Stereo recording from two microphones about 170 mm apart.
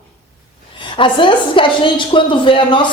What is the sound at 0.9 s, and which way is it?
A woman's voice, 30° left (ahead or behind).